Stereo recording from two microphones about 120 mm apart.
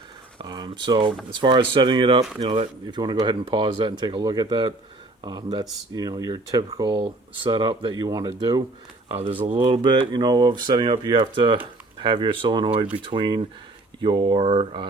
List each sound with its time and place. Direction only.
0.3 s a sound: 35° right (ahead or behind)
1.3 s speech: 40° right (ahead or behind)
2.4 s speech: 50° right (ahead or behind)
2.8 s speech: 40° right (ahead or behind)
9.0 s speech: 50° right (ahead or behind)